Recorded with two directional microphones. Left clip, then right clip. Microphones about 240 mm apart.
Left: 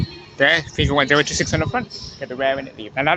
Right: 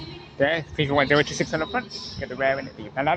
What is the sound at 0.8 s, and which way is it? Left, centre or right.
Speech, centre.